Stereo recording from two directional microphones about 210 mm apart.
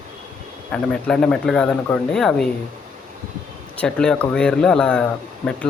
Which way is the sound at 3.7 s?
5° left (ahead or behind).